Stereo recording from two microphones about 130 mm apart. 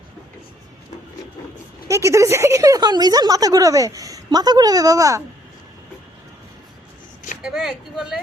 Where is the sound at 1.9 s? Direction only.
20° right (ahead or behind).